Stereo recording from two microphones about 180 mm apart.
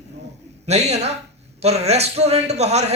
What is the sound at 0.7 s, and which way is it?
A man's voice, 40° right (ahead or behind).